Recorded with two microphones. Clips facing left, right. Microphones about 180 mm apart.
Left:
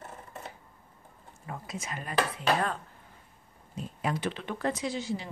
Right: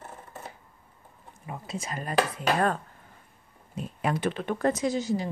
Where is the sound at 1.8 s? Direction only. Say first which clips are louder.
Right 4 dB; 40° right (ahead or behind).